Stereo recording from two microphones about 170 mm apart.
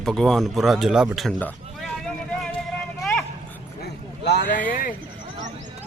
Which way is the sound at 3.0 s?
5° left (ahead or behind).